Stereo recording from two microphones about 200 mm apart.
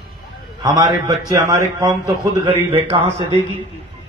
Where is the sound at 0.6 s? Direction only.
20° right (ahead or behind).